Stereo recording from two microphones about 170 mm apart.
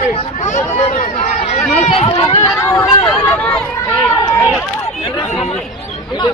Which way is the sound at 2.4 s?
15° left (ahead or behind).